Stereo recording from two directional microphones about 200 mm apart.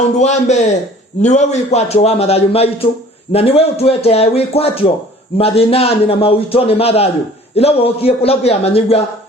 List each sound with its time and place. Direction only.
0.2 s a man's voice: 35° left (ahead or behind)